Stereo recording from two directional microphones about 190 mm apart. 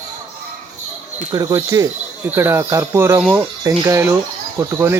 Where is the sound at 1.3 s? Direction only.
15° right (ahead or behind).